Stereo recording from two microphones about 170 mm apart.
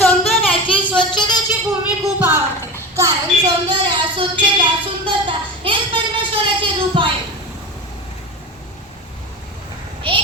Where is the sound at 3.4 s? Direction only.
25° right (ahead or behind).